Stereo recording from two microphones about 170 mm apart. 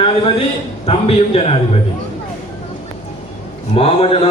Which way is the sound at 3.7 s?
35° left (ahead or behind).